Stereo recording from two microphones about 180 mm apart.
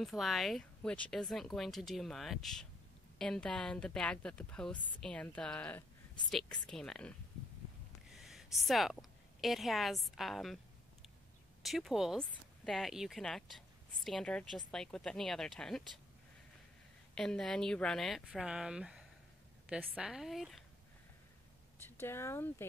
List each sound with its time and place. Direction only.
0.0 s speech: centre (ahead or behind)
8.2 s a woman's voice: centre (ahead or behind)
11.6 s speech: centre (ahead or behind)
17.1 s speech: 5° left (ahead or behind)
21.7 s speech: 10° left (ahead or behind)